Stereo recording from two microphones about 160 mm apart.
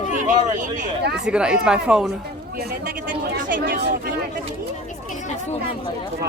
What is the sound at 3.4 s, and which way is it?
Speech, 60° right (ahead or behind).